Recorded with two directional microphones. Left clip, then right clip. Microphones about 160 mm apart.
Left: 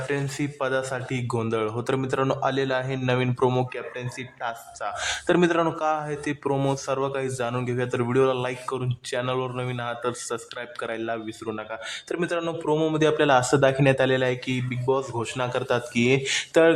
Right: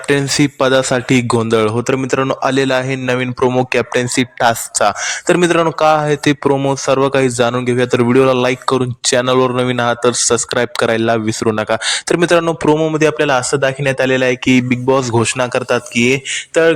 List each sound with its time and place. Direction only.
0.1 s speech: 45° right (ahead or behind)
3.6 s speech: 55° right (ahead or behind)
5.0 s speech: 30° right (ahead or behind)
12.9 s speech: 30° right (ahead or behind)